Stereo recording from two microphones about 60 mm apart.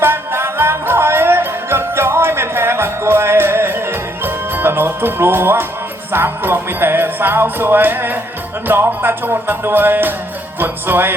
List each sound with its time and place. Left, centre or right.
0.0 s music: right